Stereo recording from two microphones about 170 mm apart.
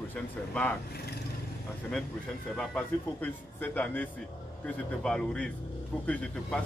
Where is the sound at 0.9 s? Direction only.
70° left (ahead or behind).